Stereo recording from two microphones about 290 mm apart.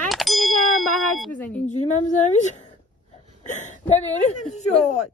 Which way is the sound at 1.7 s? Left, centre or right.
Left.